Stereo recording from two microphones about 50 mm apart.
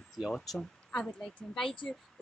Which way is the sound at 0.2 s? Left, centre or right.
Centre.